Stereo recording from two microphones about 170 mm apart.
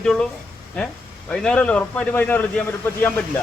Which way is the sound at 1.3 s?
5° left (ahead or behind).